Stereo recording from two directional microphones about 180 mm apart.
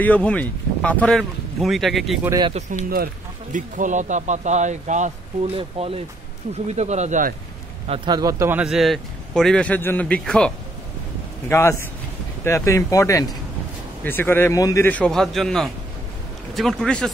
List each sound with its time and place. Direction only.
0.0 s speech: 5° left (ahead or behind)
2.2 s speech: 20° right (ahead or behind)
3.5 s speech: 45° right (ahead or behind)
7.9 s a man's voice: 25° right (ahead or behind); by 17.1 s 5° left (ahead or behind)